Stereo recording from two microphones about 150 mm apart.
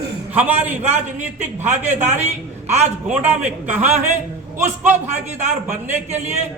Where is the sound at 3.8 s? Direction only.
50° right (ahead or behind).